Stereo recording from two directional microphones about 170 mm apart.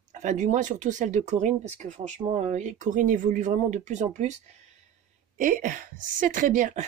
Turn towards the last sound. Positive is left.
turn(degrees=-50)  # may be behind; listen again after turning